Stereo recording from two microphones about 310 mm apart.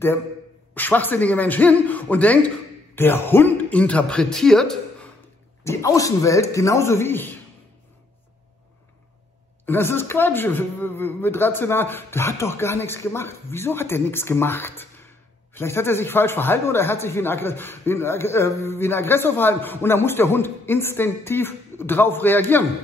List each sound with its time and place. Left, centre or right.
0.7 s a man's voice: centre
9.7 s a man's voice: centre